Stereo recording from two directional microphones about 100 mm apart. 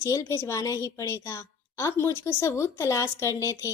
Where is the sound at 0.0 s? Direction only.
30° left (ahead or behind).